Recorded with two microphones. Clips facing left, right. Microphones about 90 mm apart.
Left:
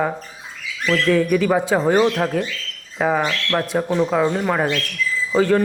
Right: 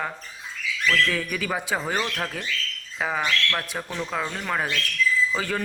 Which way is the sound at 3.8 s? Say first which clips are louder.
Left 12 dB; 30° left (ahead or behind).